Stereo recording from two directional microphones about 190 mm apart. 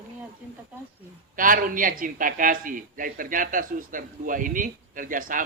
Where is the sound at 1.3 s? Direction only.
45° right (ahead or behind).